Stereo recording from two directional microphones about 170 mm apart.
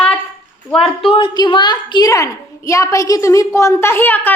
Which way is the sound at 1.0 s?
30° left (ahead or behind).